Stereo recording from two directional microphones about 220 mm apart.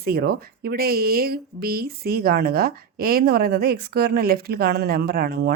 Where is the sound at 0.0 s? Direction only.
45° right (ahead or behind).